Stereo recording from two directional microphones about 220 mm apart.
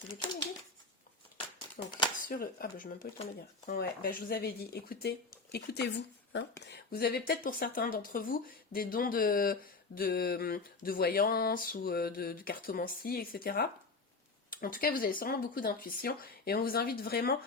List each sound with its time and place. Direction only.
1.8 s speech: 40° left (ahead or behind)